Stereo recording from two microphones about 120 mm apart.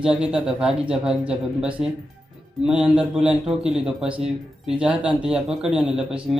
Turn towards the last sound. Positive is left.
turn(degrees=-5)  # may be behind; listen again after turning